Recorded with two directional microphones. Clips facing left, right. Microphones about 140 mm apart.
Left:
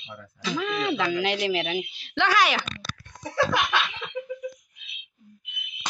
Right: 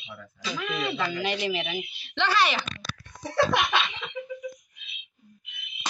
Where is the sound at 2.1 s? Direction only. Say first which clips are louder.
Left 2 dB; 10° left (ahead or behind).